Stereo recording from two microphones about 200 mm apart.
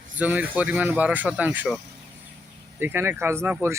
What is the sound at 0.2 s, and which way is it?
Speech, 10° right (ahead or behind).